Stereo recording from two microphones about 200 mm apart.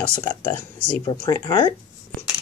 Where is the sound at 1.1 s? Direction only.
20° left (ahead or behind).